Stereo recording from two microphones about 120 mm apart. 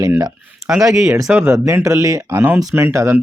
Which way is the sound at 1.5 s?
30° right (ahead or behind).